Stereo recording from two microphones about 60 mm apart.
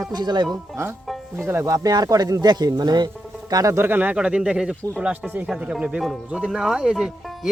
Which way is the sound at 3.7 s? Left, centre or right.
Right.